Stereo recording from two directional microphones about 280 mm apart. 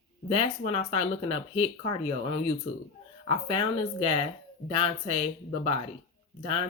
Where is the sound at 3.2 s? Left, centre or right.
Centre.